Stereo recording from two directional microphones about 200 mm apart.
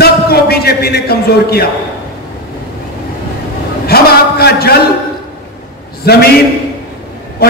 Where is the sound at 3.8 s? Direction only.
50° left (ahead or behind).